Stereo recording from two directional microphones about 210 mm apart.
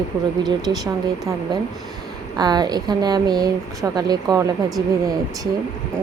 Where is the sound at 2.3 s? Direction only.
20° right (ahead or behind).